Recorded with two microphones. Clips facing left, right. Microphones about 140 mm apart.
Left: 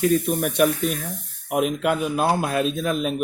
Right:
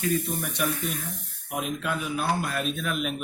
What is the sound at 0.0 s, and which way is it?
Speech, 65° left (ahead or behind).